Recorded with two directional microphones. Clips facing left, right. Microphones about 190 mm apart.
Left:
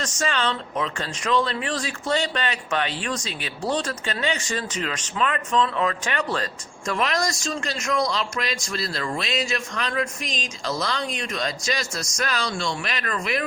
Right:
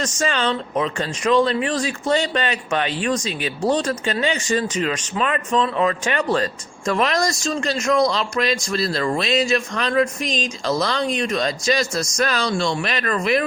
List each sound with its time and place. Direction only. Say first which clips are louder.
0.0 s speech: right 4 dB; 15° right (ahead or behind)
6.8 s a man's voice: right 5 dB; 35° right (ahead or behind)